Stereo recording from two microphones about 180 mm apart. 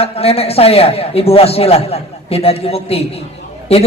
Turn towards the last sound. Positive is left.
turn(degrees=35)  # may be behind; listen again after turning